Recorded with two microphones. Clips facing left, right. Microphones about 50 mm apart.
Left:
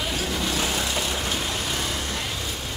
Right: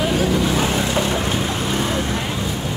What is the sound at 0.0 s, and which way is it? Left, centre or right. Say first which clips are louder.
Vehicle: right 9 dB; right.